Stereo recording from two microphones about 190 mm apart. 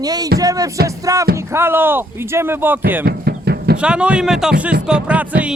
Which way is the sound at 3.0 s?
55° right (ahead or behind).